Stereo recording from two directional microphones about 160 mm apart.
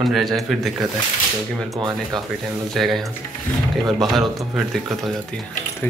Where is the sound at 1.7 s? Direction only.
25° right (ahead or behind).